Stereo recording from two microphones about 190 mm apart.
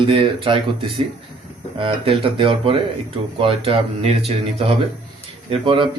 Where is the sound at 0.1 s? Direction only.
30° right (ahead or behind).